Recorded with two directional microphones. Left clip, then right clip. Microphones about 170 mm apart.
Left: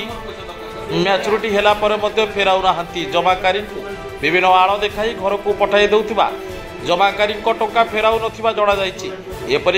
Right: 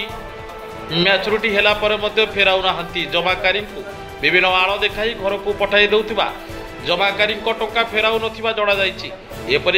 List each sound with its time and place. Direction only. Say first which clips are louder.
0.9 s a man's voice: even; 15° left (ahead or behind)